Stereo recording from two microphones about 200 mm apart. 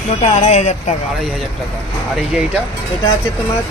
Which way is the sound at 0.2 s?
35° left (ahead or behind).